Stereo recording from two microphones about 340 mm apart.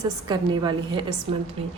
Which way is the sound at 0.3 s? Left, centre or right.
Centre.